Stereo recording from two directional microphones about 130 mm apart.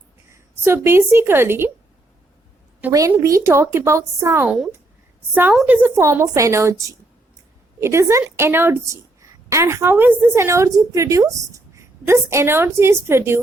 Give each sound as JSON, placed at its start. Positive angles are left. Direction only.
{"t": 0.3, "sound": "a woman's voice", "side_deg": -20}
{"t": 2.9, "sound": "a woman's voice", "side_deg": -25}
{"t": 4.4, "sound": "speech", "side_deg": 0}
{"t": 5.3, "sound": "speech", "side_deg": -15}
{"t": 6.1, "sound": "a woman's voice", "side_deg": -25}